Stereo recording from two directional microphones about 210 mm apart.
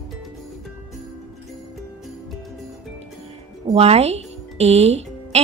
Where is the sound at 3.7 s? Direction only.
30° right (ahead or behind).